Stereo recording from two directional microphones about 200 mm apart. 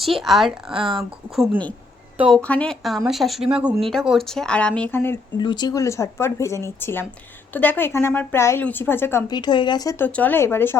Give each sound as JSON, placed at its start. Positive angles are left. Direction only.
{"t": 0.0, "sound": "speech", "side_deg": 0}
{"t": 0.7, "sound": "speech", "side_deg": -25}
{"t": 0.9, "sound": "speech", "side_deg": 5}
{"t": 5.4, "sound": "a woman's voice", "side_deg": 20}
{"t": 9.3, "sound": "a woman's voice", "side_deg": 20}